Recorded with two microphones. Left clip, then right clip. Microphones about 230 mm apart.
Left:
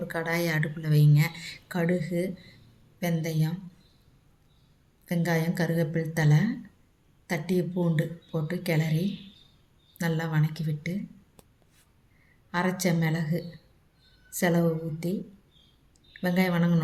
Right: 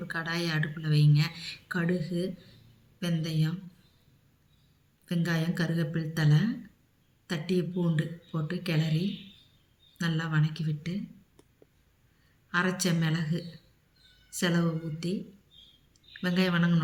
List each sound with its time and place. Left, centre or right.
0.1 s speech: centre
5.0 s speech: centre
12.5 s speech: centre
16.2 s speech: centre